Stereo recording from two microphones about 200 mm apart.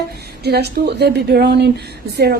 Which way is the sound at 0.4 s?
55° right (ahead or behind).